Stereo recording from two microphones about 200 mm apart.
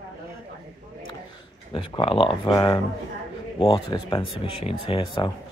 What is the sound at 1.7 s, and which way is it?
Speech, 25° left (ahead or behind).